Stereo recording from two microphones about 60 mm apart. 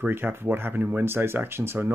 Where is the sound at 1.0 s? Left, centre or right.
Right.